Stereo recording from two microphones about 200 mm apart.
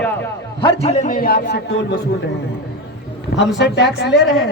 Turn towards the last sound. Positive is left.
turn(degrees=0)  # may be behind; listen again after turning